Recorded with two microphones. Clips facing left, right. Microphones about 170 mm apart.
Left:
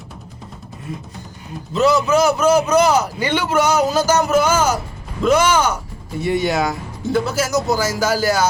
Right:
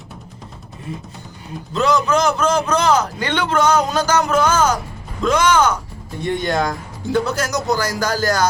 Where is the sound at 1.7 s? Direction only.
5° left (ahead or behind).